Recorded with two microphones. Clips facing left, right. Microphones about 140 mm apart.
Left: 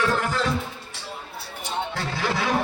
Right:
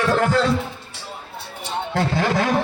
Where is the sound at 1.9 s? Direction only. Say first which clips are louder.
Right 7 dB; 55° right (ahead or behind).